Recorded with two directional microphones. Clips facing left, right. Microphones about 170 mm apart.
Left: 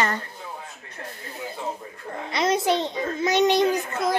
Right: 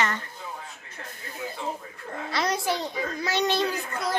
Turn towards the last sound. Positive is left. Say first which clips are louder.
# left 6 dB
turn(degrees=20)  # may be behind; listen again after turning